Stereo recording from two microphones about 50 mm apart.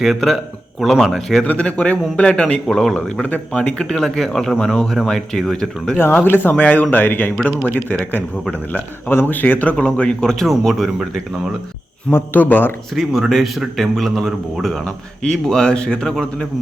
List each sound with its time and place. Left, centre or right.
0.0 s a man's voice: centre
1.5 s speech: left
2.6 s speech: centre
3.2 s speech: left
3.8 s speech: centre
6.2 s speech: left
6.6 s speech: left
8.7 s speech: left
9.7 s speech: left
10.7 s a man's voice: centre
12.1 s speech: left
13.0 s a man's voice: centre